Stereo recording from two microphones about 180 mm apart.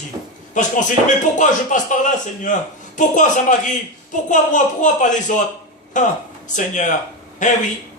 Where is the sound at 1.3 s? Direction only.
45° left (ahead or behind).